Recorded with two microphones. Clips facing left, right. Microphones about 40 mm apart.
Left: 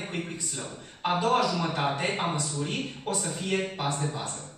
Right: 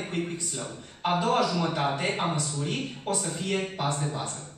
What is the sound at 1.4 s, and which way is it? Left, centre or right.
Speech, centre.